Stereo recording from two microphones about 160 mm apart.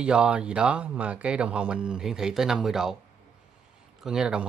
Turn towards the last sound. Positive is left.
turn(degrees=-5)  # may be behind; listen again after turning